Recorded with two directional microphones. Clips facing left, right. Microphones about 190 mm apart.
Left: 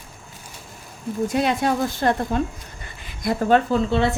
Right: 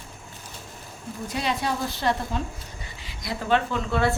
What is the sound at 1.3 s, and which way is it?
Speech, 50° left (ahead or behind).